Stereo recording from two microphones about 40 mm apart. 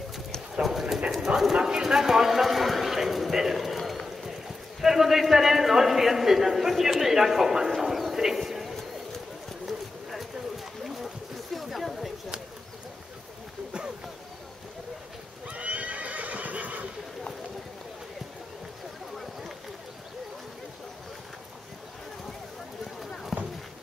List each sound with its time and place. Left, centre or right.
0.6 s clip-clop: centre
1.1 s speech: centre
3.7 s run: centre
4.8 s a man's voice: centre
11.5 s a sound: centre
15.4 s horse: right
23.3 s clip-clop: centre